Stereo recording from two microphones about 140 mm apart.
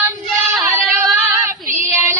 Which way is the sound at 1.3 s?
20° right (ahead or behind).